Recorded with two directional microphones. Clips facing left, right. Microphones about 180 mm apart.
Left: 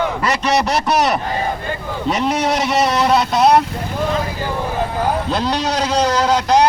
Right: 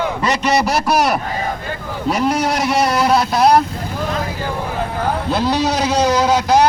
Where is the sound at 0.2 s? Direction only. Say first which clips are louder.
Right 1 dB; 15° right (ahead or behind).